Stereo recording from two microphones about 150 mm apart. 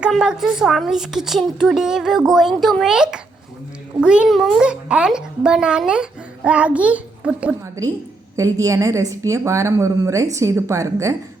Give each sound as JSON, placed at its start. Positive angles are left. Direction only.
{"t": 0.0, "sound": "a woman's voice", "side_deg": -5}
{"t": 8.4, "sound": "a woman's voice", "side_deg": -20}